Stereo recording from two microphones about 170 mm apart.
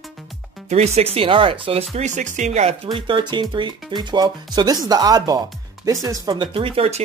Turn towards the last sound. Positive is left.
turn(degrees=-35)  # may be behind; listen again after turning